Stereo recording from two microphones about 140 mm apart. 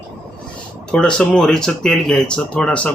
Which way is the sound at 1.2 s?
5° left (ahead or behind).